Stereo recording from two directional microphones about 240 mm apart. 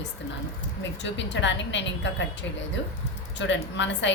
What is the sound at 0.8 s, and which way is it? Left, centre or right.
A woman's voice, left.